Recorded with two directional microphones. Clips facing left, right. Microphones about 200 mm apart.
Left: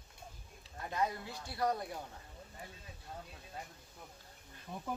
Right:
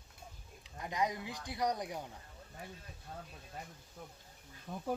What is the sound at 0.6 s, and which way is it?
Speech, 15° right (ahead or behind).